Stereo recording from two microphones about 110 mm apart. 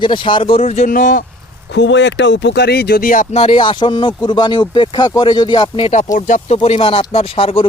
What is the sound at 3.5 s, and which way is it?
Speech, 45° left (ahead or behind).